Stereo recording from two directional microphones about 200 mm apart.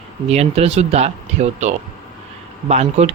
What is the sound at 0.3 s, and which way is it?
Speech, 30° right (ahead or behind).